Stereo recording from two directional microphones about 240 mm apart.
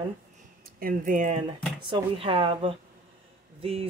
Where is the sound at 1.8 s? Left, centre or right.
Right.